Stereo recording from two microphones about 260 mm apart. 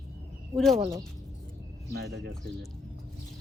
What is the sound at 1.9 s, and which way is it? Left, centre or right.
Speech, right.